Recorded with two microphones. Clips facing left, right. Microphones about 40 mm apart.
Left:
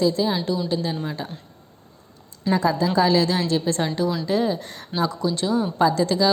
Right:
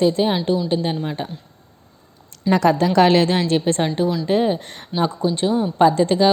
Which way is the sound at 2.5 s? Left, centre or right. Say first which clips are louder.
Right 4 dB; right.